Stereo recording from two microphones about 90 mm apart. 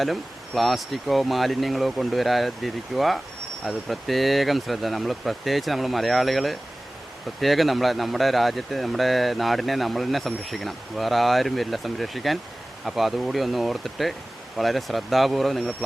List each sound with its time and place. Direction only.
0.0 s speech: centre (ahead or behind)